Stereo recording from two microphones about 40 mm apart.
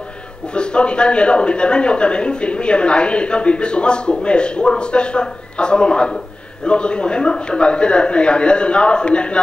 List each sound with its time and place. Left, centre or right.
0.6 s speech: left